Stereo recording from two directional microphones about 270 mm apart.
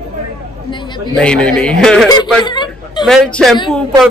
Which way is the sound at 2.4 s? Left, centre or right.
Centre.